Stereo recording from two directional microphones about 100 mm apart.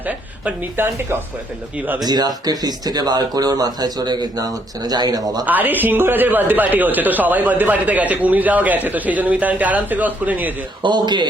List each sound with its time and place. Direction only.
0.4 s speech: 20° right (ahead or behind)
2.0 s speech: 40° right (ahead or behind)
5.5 s speech: 20° right (ahead or behind)
10.8 s a man's voice: 50° right (ahead or behind)